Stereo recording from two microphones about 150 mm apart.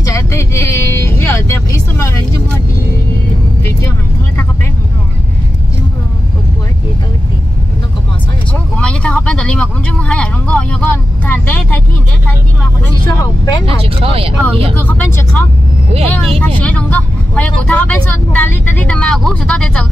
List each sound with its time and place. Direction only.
0.0 s vehicle: 20° left (ahead or behind)
8.7 s vehicle: 5° left (ahead or behind)
13.7 s speech: 40° right (ahead or behind)
14.8 s speech: 10° left (ahead or behind)